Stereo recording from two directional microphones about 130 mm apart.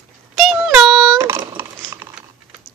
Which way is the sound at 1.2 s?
20° right (ahead or behind).